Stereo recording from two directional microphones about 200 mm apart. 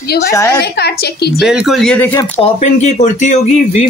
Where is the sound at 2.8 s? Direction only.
35° left (ahead or behind).